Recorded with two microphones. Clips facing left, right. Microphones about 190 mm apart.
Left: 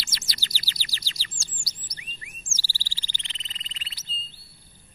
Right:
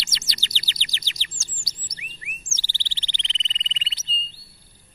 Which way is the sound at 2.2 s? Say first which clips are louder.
Right 3 dB; 20° right (ahead or behind).